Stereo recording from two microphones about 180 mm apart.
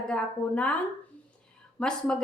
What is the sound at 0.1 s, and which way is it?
Speech, 5° left (ahead or behind).